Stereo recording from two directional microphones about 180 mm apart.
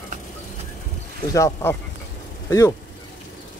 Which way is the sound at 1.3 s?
20° left (ahead or behind).